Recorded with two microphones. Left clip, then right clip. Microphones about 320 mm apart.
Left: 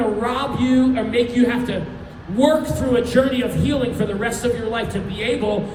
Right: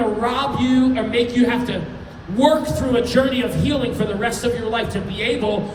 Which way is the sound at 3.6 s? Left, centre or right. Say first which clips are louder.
Even; centre.